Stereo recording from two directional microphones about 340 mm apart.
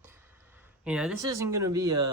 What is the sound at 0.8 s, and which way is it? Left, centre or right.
Speech, centre.